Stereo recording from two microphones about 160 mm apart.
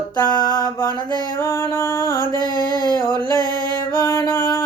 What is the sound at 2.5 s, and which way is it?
Music, 25° right (ahead or behind).